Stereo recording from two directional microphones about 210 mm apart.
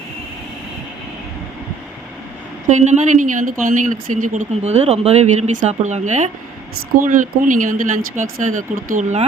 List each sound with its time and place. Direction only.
2.6 s speech: 35° right (ahead or behind)